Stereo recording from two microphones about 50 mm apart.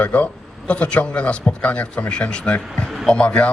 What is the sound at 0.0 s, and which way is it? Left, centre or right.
A man's voice, left.